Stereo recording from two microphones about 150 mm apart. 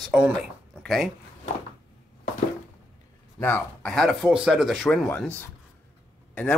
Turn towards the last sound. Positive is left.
turn(degrees=10)  # may be behind; listen again after turning